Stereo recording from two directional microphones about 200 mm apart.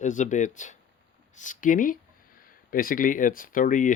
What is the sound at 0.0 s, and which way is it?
Speech, 40° left (ahead or behind).